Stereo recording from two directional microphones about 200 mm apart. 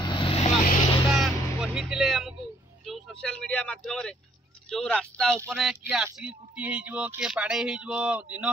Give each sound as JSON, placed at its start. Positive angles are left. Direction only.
{"t": 0.0, "sound": "vehicle", "side_deg": 25}
{"t": 1.1, "sound": "music", "side_deg": 0}
{"t": 2.8, "sound": "speech", "side_deg": 0}